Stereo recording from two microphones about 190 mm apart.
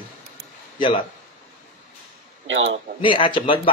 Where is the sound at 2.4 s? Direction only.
70° right (ahead or behind).